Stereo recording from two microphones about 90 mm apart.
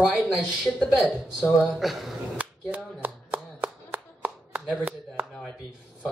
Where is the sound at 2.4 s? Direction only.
20° right (ahead or behind).